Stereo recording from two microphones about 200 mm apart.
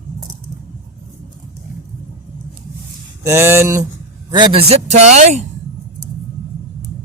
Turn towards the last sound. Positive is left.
turn(degrees=-35)  # may be behind; listen again after turning